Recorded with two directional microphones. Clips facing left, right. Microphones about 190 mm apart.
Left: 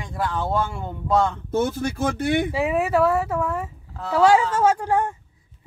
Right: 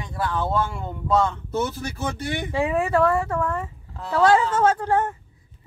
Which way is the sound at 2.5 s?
5° left (ahead or behind).